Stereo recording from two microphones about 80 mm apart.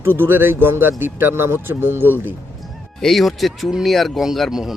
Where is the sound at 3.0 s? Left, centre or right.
Centre.